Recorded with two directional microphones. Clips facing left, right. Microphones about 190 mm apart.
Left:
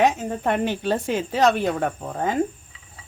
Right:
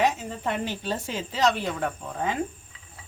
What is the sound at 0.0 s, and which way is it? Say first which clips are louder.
A woman's voice: left 5 dB; 55° left (ahead or behind).